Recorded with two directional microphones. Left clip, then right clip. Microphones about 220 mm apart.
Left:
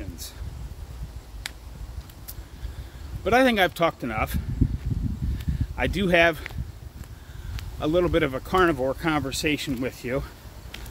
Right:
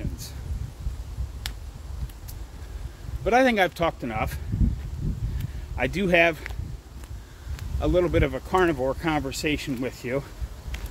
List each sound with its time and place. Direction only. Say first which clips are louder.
1.4 s a sound: even; 5° right (ahead or behind)
3.3 s speech: even; 15° left (ahead or behind)
5.8 s speech: even; 10° left (ahead or behind)
7.8 s speech: even; 15° left (ahead or behind)